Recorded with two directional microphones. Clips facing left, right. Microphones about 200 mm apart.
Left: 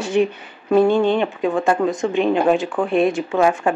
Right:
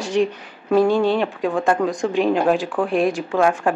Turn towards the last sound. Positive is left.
turn(degrees=0)  # may be behind; listen again after turning